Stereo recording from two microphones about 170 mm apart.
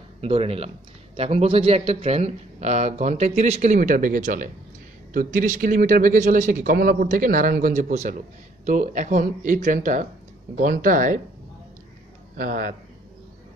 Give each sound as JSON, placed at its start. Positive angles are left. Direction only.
{"t": 0.2, "sound": "speech", "side_deg": -35}
{"t": 12.4, "sound": "a man's voice", "side_deg": -55}